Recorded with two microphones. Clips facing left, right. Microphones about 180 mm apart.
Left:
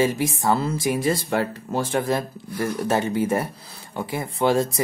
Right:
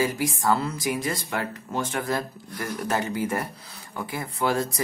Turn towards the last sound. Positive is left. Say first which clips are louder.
# left 5 dB
turn(degrees=25)  # may be behind; listen again after turning